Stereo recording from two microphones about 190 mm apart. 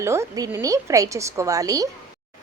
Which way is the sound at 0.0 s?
15° right (ahead or behind).